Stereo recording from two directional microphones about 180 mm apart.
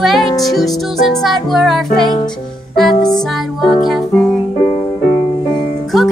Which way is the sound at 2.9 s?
25° left (ahead or behind).